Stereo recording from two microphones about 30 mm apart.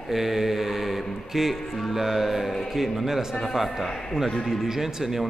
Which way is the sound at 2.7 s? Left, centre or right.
Centre.